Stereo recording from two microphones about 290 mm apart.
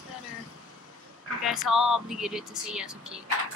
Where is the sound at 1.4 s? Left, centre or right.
Centre.